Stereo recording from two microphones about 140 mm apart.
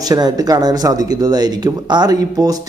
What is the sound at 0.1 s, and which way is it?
Speech, 30° right (ahead or behind).